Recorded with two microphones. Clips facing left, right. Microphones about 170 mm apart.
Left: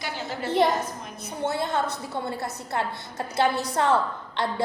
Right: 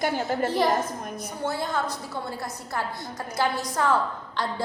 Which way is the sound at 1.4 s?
25° left (ahead or behind).